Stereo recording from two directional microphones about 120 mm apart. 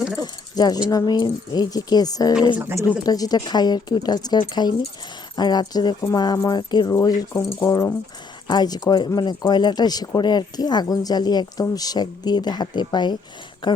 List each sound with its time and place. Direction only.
0.2 s speech: 35° left (ahead or behind)